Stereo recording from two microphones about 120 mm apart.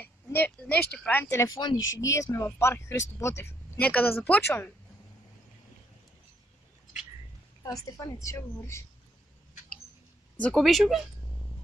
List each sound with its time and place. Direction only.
0.0 s speech: 15° left (ahead or behind)
1.3 s speech: 25° left (ahead or behind)
3.7 s a woman's voice: 10° left (ahead or behind)
7.6 s speech: 30° left (ahead or behind)
10.5 s speech: centre (ahead or behind)